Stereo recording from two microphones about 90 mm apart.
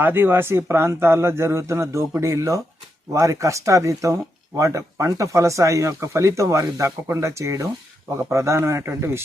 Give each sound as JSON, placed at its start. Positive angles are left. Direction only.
{"t": 0.0, "sound": "speech", "side_deg": -25}